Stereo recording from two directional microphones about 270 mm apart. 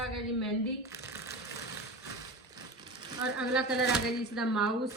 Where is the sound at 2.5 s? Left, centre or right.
Centre.